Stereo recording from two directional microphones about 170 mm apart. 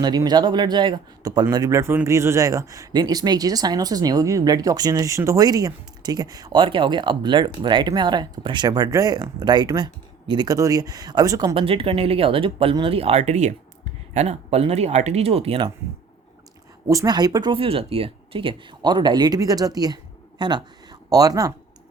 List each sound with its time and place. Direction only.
0.0 s speech: 25° right (ahead or behind)
11.5 s speech: 35° right (ahead or behind)
16.9 s speech: 20° right (ahead or behind)